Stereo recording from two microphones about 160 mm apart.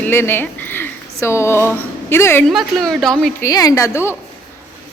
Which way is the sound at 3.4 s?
20° left (ahead or behind).